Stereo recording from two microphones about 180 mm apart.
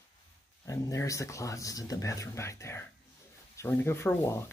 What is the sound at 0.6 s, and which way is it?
Speech, 20° left (ahead or behind).